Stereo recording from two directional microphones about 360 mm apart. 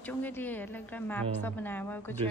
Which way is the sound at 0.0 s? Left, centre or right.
Centre.